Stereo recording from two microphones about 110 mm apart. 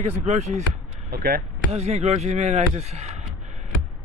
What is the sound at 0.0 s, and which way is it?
Speech, 90° right.